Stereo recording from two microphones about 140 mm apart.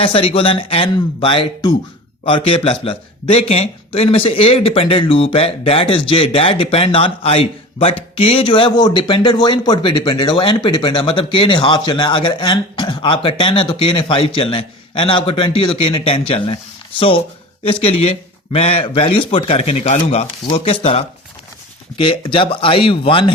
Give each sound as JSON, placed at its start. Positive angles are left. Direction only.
{"t": 0.0, "sound": "a man's voice", "side_deg": 40}
{"t": 17.6, "sound": "a man's voice", "side_deg": 40}